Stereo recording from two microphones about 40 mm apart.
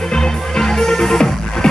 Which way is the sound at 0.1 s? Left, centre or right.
Centre.